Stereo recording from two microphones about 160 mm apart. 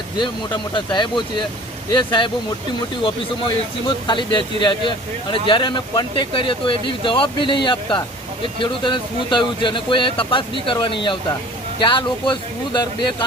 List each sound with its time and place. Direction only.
0.2 s speech: 30° left (ahead or behind)
3.4 s speech: 30° left (ahead or behind)